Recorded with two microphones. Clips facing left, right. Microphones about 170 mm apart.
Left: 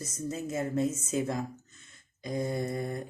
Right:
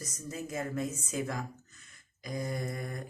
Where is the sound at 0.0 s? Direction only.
25° left (ahead or behind).